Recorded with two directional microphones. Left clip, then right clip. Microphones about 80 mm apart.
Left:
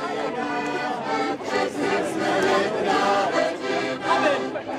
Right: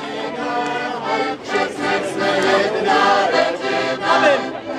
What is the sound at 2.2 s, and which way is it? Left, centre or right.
Music, right.